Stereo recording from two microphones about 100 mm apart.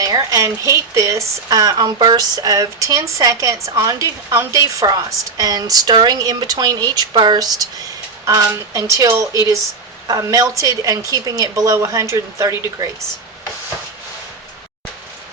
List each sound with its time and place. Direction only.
0.0 s speech: 35° right (ahead or behind)